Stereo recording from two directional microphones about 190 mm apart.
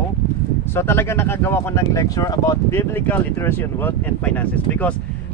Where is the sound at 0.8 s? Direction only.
10° left (ahead or behind).